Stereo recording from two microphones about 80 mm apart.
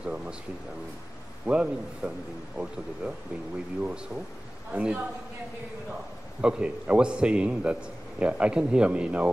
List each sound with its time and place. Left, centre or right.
0.0 s a man's voice: centre
1.4 s a man's voice: centre
6.4 s a man's voice: centre